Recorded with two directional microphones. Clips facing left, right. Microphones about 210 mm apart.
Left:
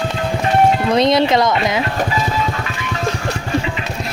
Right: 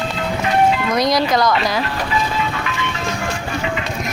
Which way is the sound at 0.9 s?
25° left (ahead or behind).